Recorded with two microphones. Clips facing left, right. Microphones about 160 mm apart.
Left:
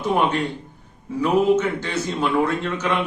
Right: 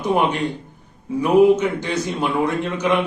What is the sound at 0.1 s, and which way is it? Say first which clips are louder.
A man's voice: right 1 dB; 15° right (ahead or behind).